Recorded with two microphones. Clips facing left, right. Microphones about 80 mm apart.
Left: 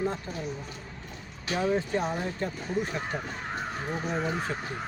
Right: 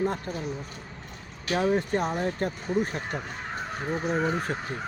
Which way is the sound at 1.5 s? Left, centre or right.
Right.